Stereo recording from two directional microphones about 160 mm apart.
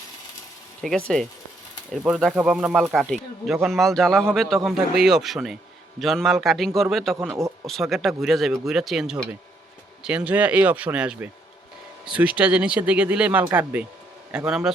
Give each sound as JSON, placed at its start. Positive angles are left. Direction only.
{"t": 0.8, "sound": "speech", "side_deg": 5}
{"t": 2.3, "sound": "speech", "side_deg": -10}
{"t": 7.2, "sound": "speech", "side_deg": -15}
{"t": 7.7, "sound": "speech", "side_deg": 0}